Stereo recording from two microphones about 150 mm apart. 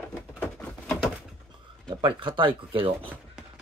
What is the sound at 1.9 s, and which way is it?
Speech, 35° right (ahead or behind).